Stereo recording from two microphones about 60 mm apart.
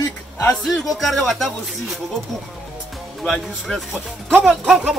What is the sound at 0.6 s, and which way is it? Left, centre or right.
Speech, centre.